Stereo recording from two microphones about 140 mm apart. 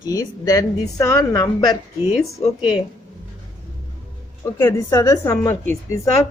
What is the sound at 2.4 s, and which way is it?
Speech, 45° left (ahead or behind).